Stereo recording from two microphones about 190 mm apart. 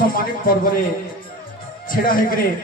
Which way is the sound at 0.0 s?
45° left (ahead or behind).